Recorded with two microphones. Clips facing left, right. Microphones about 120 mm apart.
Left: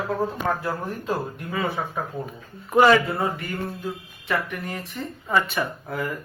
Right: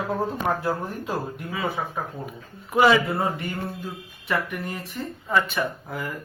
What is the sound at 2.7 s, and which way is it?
Speech, centre (ahead or behind).